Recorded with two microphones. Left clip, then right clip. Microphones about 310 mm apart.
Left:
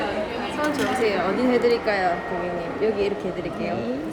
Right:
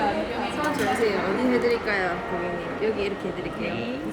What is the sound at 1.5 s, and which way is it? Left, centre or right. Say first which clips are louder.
Speech: left 4 dB; centre.